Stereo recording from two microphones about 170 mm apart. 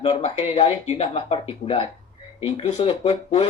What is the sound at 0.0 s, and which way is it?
Speech, 35° left (ahead or behind).